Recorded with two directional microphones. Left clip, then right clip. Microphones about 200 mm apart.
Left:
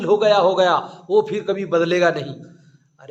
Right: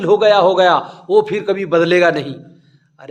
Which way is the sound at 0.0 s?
35° right (ahead or behind).